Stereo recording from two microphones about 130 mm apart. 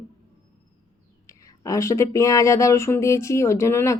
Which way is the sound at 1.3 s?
25° left (ahead or behind).